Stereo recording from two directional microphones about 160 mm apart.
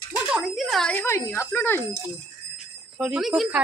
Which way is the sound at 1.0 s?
15° left (ahead or behind).